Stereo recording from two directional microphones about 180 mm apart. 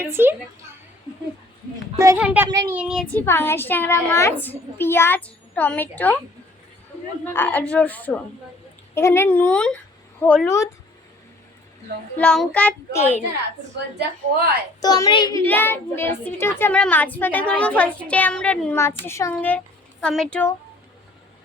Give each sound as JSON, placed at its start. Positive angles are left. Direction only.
{"t": 0.0, "sound": "a child's voice", "side_deg": -10}
{"t": 2.1, "sound": "a child's voice", "side_deg": -10}
{"t": 3.2, "sound": "a child's voice", "side_deg": 15}
{"t": 7.3, "sound": "a child's voice", "side_deg": 10}
{"t": 12.1, "sound": "a child's voice", "side_deg": 5}
{"t": 14.8, "sound": "a woman's voice", "side_deg": 20}
{"t": 15.4, "sound": "a child's voice", "side_deg": 10}